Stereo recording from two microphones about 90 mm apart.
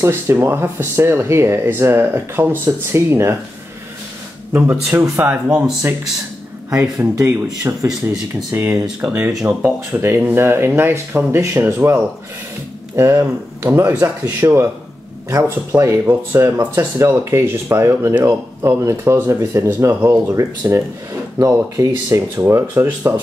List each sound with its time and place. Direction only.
0.0 s speech: 30° right (ahead or behind)
4.5 s speech: 25° right (ahead or behind)
7.0 s speech: 30° right (ahead or behind)
8.1 s speech: 5° right (ahead or behind)
9.5 s speech: 25° right (ahead or behind)